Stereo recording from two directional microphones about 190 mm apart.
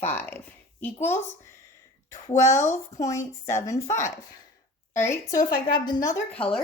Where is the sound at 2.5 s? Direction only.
15° left (ahead or behind).